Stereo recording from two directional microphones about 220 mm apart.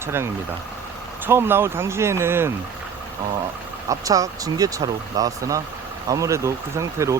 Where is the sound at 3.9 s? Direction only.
15° right (ahead or behind).